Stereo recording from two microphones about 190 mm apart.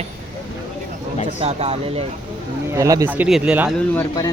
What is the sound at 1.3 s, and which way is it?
Speech, 35° right (ahead or behind).